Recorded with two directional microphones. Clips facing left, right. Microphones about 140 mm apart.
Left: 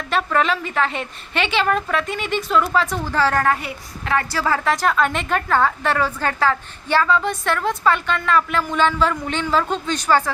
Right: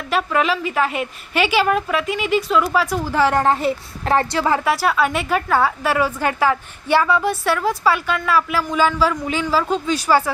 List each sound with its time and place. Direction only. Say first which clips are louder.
0.1 s a woman's voice: right 1 dB; 5° right (ahead or behind); by 4.3 s 35° right (ahead or behind)
4.3 s a woman's voice: right 2 dB; 20° right (ahead or behind)
4.7 s a woman's voice: right 1 dB; 5° right (ahead or behind)